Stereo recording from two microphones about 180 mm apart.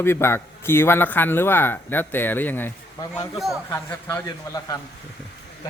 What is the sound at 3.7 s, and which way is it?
A man's voice, 15° left (ahead or behind).